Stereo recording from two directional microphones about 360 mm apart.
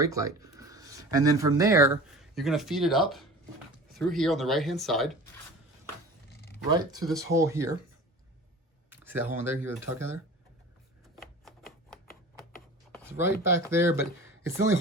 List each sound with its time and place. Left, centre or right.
0.0 s speech: centre
6.7 s speech: centre
8.9 s speech: centre
13.1 s speech: centre